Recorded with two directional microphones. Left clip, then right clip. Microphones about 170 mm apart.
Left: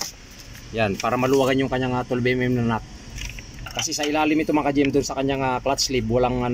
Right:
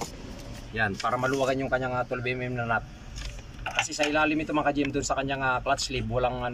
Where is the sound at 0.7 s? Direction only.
20° left (ahead or behind).